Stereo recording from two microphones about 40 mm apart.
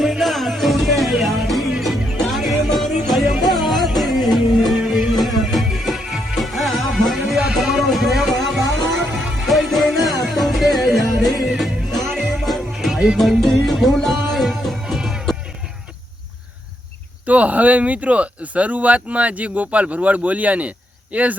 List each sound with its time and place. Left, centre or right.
0.0 s music: centre
17.2 s speech: right